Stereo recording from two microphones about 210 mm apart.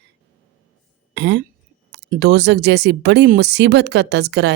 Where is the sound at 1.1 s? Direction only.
60° right (ahead or behind).